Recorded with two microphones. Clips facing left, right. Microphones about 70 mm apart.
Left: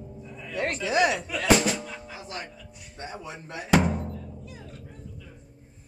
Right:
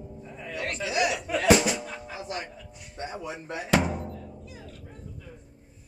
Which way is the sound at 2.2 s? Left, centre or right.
Centre.